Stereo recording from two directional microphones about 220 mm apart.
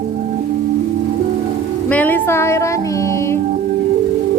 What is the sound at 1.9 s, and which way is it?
Music, 10° left (ahead or behind).